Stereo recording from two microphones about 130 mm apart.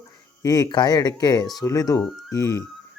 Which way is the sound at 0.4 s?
30° left (ahead or behind).